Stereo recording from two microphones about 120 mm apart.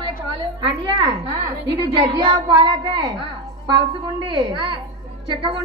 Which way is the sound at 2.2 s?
35° right (ahead or behind).